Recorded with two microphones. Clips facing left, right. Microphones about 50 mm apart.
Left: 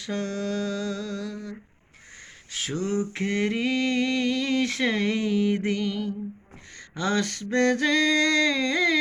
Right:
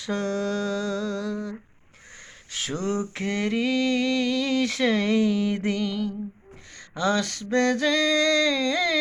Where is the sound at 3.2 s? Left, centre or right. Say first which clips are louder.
Even; left.